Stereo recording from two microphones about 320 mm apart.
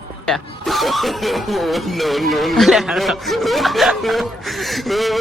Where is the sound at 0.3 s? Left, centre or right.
Centre.